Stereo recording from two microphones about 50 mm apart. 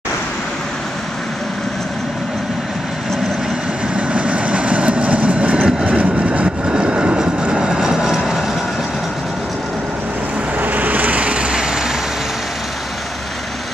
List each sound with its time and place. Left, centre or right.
3.9 s train: right
5.9 s vehicle: right
6.7 s train: centre
10.6 s vehicle: right; by 11.8 s centre